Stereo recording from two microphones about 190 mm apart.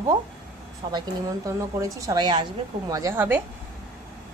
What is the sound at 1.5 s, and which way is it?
Speech, 15° right (ahead or behind).